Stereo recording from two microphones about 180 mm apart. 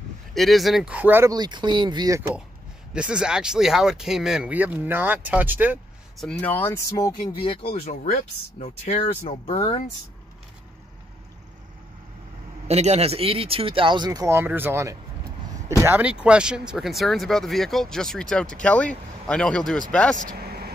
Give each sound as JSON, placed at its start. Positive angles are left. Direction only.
{"t": 0.3, "sound": "speech", "side_deg": 0}
{"t": 1.3, "sound": "speech", "side_deg": -25}
{"t": 2.9, "sound": "speech", "side_deg": -5}
{"t": 6.1, "sound": "speech", "side_deg": 5}
{"t": 8.0, "sound": "speech", "side_deg": 45}
{"t": 12.6, "sound": "speech", "side_deg": -35}
{"t": 20.2, "sound": "vehicle", "side_deg": -55}